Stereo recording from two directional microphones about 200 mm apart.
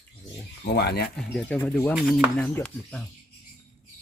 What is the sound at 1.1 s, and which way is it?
Speech, 5° left (ahead or behind).